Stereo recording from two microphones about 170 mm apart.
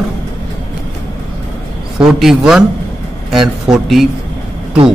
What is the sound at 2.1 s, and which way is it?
Speech, centre (ahead or behind).